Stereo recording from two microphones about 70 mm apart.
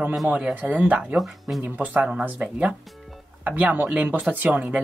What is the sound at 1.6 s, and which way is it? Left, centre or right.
Speech, right.